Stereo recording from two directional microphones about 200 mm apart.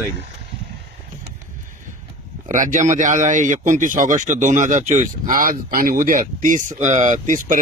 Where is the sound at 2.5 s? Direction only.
40° right (ahead or behind).